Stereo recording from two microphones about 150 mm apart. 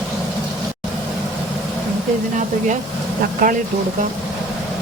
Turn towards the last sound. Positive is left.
turn(degrees=-60)  # may be behind; listen again after turning